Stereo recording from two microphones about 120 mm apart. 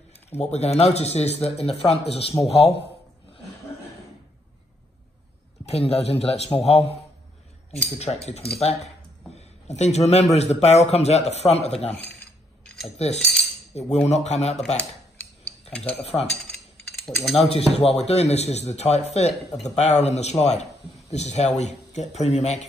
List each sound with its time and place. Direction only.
0.4 s a man's voice: 60° left (ahead or behind)
5.7 s a man's voice: 60° left (ahead or behind)
8.0 s a man's voice: 65° left (ahead or behind)
16.0 s a man's voice: 55° left (ahead or behind)
16.3 s cutlery: centre (ahead or behind)
17.4 s a man's voice: 60° left (ahead or behind)